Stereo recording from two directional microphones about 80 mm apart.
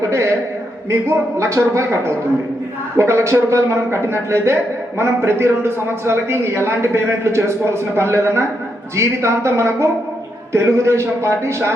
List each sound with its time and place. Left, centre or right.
0.0 s a man's voice: right